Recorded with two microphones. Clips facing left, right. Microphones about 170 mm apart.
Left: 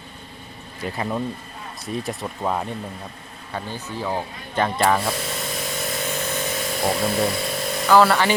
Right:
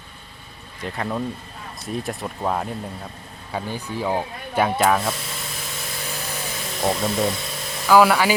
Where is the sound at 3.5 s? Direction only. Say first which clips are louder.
Right 2 dB; 15° right (ahead or behind).